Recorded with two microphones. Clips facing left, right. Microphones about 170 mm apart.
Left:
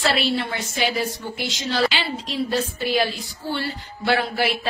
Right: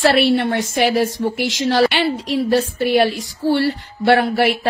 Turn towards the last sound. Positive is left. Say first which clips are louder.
# right 7 dB
turn(degrees=-70)  # may be behind; listen again after turning